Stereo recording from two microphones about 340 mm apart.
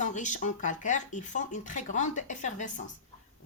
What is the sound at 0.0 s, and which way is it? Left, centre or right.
A woman's voice, left.